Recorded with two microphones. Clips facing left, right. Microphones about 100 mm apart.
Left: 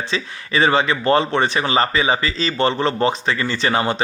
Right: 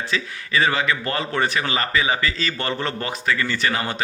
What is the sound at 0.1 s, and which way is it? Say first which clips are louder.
Speech: even; 30° left (ahead or behind).